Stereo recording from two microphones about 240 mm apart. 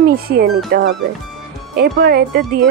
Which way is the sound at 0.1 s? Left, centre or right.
Right.